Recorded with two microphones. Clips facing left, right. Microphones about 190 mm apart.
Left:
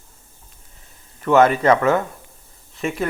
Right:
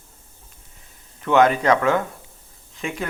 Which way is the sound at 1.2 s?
Centre (ahead or behind).